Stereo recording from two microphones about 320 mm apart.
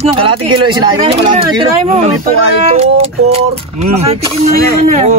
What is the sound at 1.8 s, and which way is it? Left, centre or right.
Speech, right.